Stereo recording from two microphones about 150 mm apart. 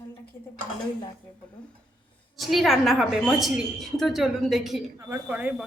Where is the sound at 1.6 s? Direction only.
5° left (ahead or behind).